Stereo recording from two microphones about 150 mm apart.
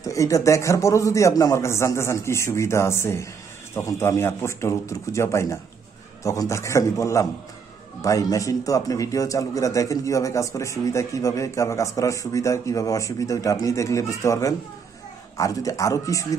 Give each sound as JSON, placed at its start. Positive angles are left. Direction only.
{"t": 0.0, "sound": "a man's voice", "side_deg": 20}